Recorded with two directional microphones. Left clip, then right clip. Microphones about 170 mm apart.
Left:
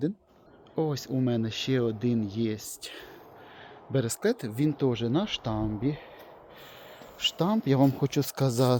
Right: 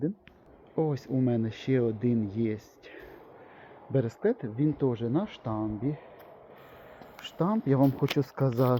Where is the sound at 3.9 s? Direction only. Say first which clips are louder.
Even; 20° left (ahead or behind); by 6.0 s 35° left (ahead or behind).